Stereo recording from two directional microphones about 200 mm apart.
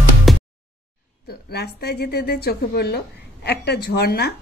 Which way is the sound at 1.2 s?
55° left (ahead or behind).